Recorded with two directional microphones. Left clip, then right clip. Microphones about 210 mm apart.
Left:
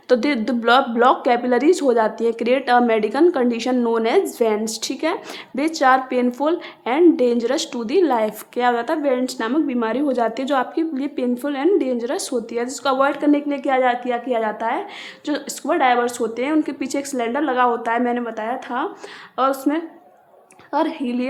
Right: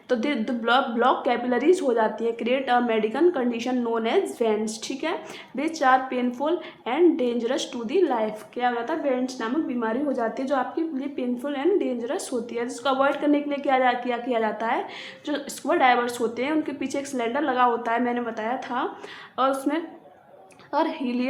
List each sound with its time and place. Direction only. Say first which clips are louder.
0.1 s a woman's voice: left 7 dB; 35° left (ahead or behind)